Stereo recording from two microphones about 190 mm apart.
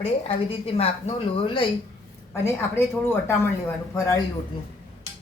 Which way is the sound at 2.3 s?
15° left (ahead or behind).